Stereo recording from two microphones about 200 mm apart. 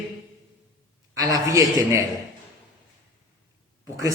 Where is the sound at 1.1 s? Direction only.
15° right (ahead or behind).